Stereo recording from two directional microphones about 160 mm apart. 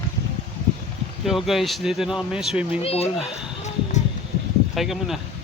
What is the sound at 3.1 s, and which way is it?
Speech, centre (ahead or behind).